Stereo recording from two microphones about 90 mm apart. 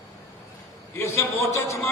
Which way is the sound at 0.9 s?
30° left (ahead or behind).